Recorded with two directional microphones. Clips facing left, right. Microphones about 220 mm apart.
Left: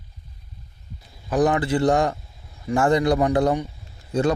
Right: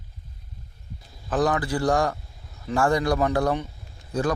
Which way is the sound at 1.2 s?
15° left (ahead or behind).